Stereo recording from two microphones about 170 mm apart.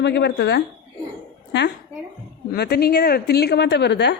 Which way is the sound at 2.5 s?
70° left (ahead or behind).